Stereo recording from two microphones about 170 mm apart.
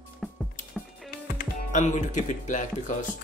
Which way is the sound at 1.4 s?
45° left (ahead or behind).